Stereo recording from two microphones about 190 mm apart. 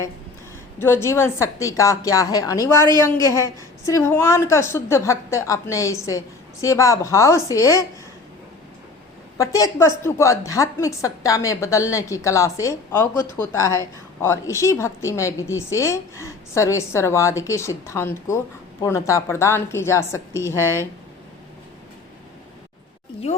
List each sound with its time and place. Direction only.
0.8 s a woman's voice: 15° left (ahead or behind)
9.4 s a woman's voice: 15° left (ahead or behind)